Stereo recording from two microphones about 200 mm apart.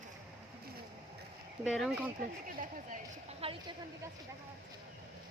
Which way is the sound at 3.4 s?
30° right (ahead or behind).